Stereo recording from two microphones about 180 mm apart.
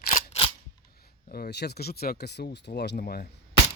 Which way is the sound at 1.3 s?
65° left (ahead or behind).